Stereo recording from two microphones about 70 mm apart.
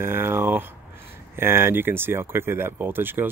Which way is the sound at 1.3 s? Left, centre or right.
Right.